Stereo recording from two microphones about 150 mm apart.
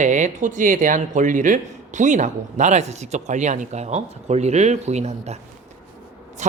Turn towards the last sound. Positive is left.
turn(degrees=-55)  # may be behind; listen again after turning